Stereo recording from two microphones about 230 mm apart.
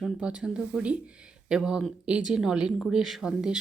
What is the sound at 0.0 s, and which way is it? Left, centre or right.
Speech, centre.